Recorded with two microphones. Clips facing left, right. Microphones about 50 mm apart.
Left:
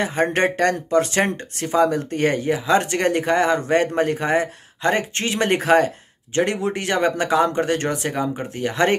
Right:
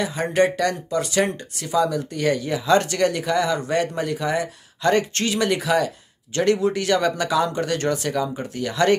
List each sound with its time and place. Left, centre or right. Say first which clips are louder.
0.0 s speech: left 1 dB; left
2.5 s speech: even; left
6.3 s speech: right 1 dB; left